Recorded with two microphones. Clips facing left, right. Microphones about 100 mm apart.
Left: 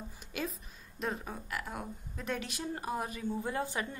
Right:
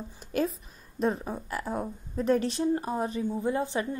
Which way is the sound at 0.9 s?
35° right (ahead or behind).